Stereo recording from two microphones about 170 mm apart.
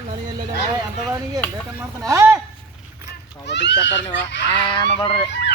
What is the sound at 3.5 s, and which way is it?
Speech, 90° left.